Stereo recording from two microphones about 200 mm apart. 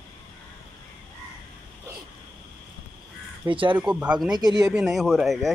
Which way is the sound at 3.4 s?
25° right (ahead or behind).